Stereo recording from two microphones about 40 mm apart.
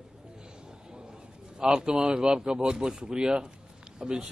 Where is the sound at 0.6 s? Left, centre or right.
Centre.